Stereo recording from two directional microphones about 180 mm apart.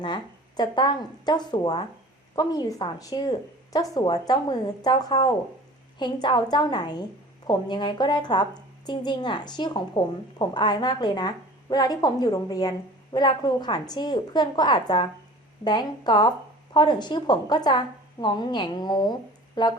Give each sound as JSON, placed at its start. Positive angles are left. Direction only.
{"t": 0.0, "sound": "a woman's voice", "side_deg": 25}